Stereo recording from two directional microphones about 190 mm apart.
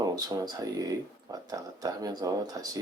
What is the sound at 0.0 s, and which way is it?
Speech, 20° right (ahead or behind).